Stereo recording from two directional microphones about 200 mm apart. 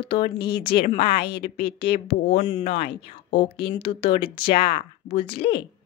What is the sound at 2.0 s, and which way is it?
Speech, 30° left (ahead or behind).